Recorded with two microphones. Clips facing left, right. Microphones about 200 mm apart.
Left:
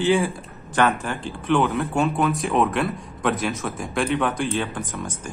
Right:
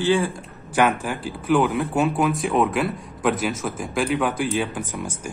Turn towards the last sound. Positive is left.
turn(degrees=-10)  # may be behind; listen again after turning